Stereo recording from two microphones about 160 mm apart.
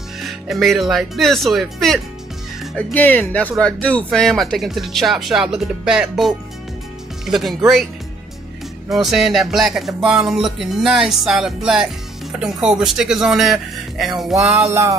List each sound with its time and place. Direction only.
0.2 s music: centre (ahead or behind)
2.9 s speech: 10° left (ahead or behind)
3.6 s music: 5° left (ahead or behind)
8.9 s music: centre (ahead or behind)
14.5 s music: 20° right (ahead or behind)